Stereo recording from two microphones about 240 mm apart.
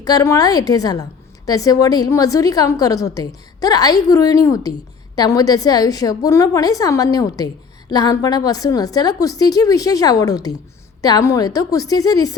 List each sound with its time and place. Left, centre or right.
0.0 s a woman's voice: centre